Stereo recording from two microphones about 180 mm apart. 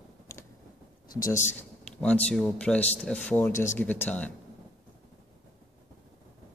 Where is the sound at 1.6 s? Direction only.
5° left (ahead or behind).